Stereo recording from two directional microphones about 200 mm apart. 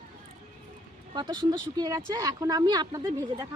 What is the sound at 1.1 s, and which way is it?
Speech, 20° right (ahead or behind).